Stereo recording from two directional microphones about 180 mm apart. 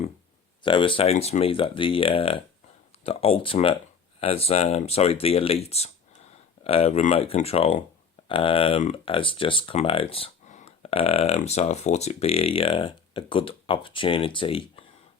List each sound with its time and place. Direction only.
0.6 s speech: 30° left (ahead or behind)